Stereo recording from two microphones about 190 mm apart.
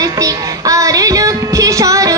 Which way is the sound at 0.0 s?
20° right (ahead or behind).